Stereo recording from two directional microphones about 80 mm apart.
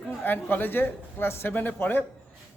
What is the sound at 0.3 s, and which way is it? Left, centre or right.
A man's voice, left.